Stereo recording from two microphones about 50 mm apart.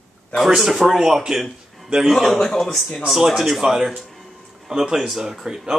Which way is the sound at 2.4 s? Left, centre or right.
Centre.